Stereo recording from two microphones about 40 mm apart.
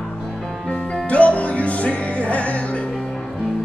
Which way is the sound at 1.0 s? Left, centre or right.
Left.